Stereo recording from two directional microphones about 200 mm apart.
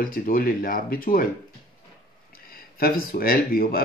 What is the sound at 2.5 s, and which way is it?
Speech, 45° left (ahead or behind).